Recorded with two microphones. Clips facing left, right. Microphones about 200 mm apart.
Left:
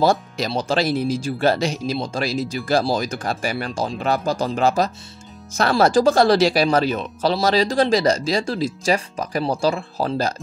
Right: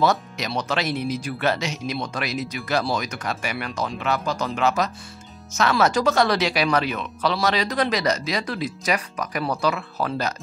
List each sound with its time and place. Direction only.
0.0 s speech: 30° left (ahead or behind)